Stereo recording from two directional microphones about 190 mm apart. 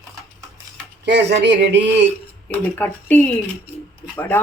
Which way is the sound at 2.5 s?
10° left (ahead or behind).